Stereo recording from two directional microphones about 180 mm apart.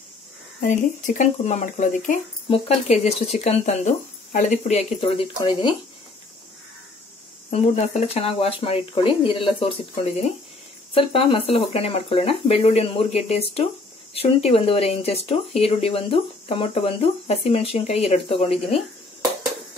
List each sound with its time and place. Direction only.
0.6 s speech: 45° left (ahead or behind); by 5.8 s 25° left (ahead or behind)
7.5 s speech: 35° left (ahead or behind)
11.0 s speech: 30° left (ahead or behind)